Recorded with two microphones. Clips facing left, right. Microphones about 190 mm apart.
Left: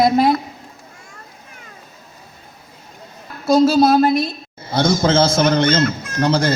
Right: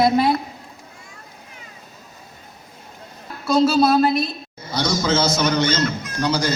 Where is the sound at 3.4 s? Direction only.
35° left (ahead or behind).